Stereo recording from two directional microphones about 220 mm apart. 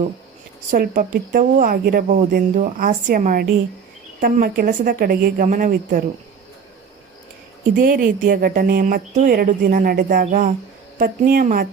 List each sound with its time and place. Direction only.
0.7 s speech: 40° right (ahead or behind)
7.7 s speech: 40° right (ahead or behind)